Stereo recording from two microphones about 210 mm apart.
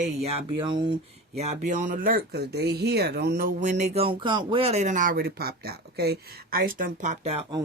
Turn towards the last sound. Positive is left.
turn(degrees=-30)  # may be behind; listen again after turning